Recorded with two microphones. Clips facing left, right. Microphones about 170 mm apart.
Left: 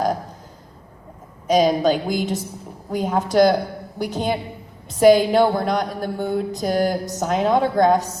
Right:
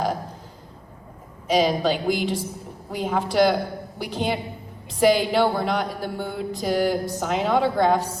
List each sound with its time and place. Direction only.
1.5 s a woman's voice: 45° left (ahead or behind)